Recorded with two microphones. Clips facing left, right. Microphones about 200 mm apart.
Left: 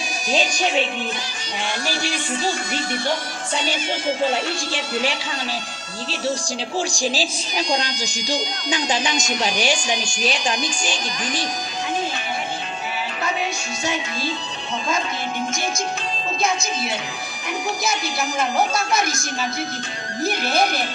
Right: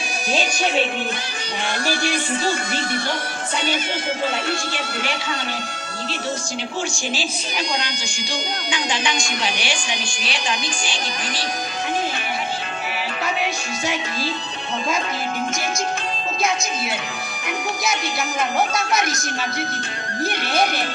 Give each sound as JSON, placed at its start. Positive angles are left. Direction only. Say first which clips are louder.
{"t": 1.9, "sound": "speech", "louder": "right 6 dB", "side_deg": -60}
{"t": 7.1, "sound": "speech", "louder": "left 1 dB", "side_deg": 35}